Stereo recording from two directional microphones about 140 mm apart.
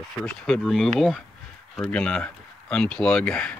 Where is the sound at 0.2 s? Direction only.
5° left (ahead or behind).